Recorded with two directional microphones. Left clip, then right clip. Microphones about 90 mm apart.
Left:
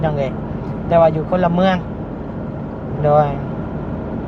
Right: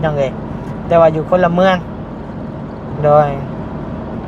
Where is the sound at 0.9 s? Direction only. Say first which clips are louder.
Right 3 dB; 55° right (ahead or behind).